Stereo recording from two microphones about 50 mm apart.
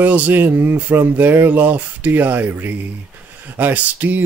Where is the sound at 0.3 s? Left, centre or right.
Right.